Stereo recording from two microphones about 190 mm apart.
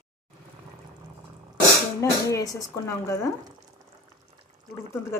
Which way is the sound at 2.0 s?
15° left (ahead or behind).